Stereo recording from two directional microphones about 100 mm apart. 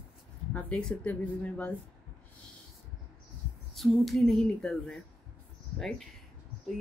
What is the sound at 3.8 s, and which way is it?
Speech, centre (ahead or behind).